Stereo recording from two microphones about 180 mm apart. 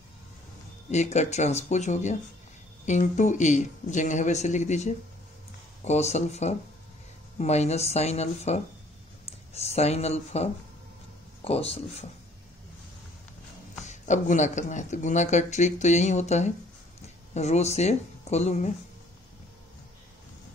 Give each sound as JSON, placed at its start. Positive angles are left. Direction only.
{"t": 0.8, "sound": "speech", "side_deg": 40}
{"t": 13.8, "sound": "speech", "side_deg": 40}